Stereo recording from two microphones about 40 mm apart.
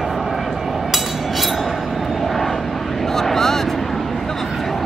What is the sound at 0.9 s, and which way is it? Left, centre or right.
Vehicle, centre.